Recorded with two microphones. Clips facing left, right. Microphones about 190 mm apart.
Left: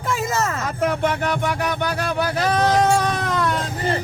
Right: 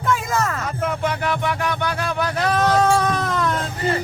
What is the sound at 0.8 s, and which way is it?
Music, 55° left (ahead or behind).